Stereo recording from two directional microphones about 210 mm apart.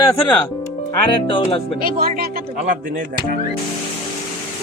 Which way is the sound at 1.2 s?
25° left (ahead or behind).